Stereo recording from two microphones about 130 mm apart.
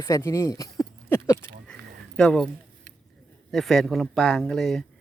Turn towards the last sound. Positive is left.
turn(degrees=5)  # may be behind; listen again after turning